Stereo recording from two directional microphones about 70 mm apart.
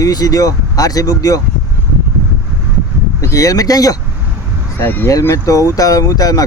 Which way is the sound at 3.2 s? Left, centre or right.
Left.